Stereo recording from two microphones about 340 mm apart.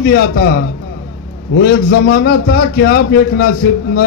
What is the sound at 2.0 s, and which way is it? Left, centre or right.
A man's voice, left.